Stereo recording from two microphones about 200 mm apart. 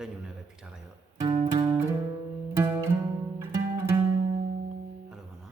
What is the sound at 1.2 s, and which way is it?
Music, 20° right (ahead or behind).